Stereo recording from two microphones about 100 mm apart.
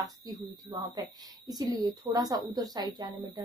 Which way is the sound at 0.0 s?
40° right (ahead or behind).